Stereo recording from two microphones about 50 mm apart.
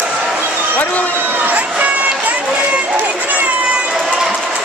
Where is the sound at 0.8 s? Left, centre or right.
Left.